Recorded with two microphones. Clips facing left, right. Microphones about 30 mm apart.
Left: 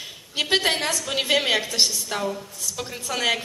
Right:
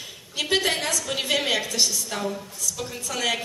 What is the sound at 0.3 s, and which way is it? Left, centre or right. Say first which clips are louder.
A woman's voice: left 2 dB; left.